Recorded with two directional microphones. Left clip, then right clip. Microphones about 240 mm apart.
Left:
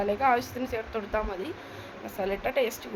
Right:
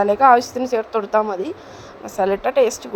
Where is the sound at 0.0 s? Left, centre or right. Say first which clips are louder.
Right 12 dB; right.